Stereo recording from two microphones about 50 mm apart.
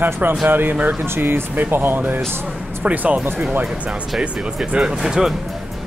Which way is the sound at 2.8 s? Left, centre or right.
Right.